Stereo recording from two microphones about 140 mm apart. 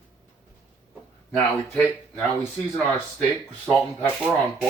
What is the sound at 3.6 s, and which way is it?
Speech, 10° left (ahead or behind).